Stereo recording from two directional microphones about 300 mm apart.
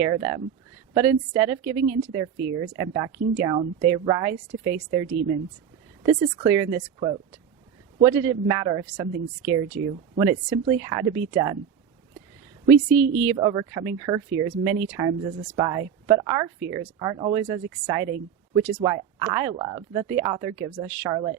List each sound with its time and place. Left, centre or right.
0.0 s a woman's voice: centre
2.4 s speech: right
2.7 s a woman's voice: centre
12.7 s speech: right
13.2 s a woman's voice: centre